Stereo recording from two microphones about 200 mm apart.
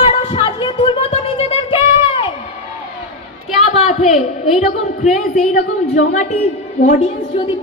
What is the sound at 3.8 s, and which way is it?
Speech, 35° left (ahead or behind).